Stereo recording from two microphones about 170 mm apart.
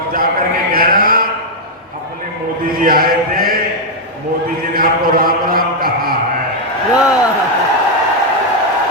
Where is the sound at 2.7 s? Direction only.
60° right (ahead or behind).